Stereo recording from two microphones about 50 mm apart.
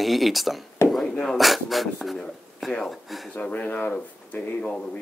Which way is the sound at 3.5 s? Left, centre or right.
Left.